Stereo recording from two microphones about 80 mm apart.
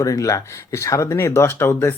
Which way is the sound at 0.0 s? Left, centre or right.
Left.